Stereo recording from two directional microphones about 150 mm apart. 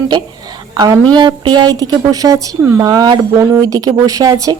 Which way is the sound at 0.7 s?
25° right (ahead or behind).